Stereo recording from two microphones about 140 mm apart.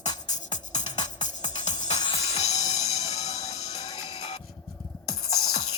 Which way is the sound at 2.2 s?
50° left (ahead or behind).